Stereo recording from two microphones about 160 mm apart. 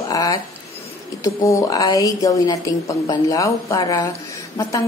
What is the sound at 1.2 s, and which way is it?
A woman's voice, 20° left (ahead or behind).